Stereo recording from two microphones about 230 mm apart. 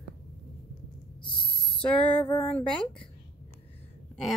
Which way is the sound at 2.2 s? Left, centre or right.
Left.